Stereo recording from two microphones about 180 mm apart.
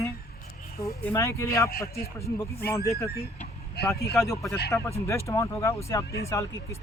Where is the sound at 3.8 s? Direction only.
65° left (ahead or behind).